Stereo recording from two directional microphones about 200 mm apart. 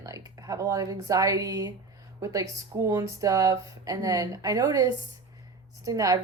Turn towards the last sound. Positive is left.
turn(degrees=-15)  # may be behind; listen again after turning